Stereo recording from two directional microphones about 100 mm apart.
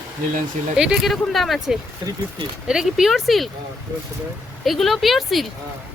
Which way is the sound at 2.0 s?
40° right (ahead or behind).